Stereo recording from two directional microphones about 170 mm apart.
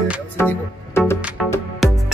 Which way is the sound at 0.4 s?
15° left (ahead or behind).